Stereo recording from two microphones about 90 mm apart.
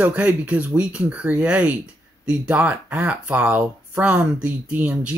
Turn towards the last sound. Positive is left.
turn(degrees=-15)  # may be behind; listen again after turning